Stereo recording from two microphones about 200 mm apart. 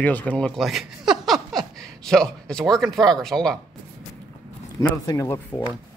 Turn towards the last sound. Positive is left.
turn(degrees=15)  # may be behind; listen again after turning